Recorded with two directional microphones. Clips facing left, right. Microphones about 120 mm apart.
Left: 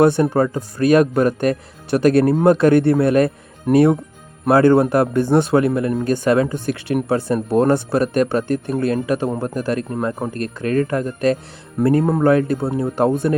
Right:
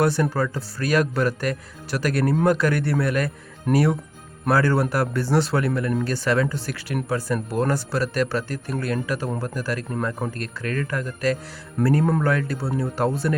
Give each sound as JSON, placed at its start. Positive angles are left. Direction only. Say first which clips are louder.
{"t": 0.0, "sound": "a man's voice", "louder": "left 7 dB", "side_deg": 20}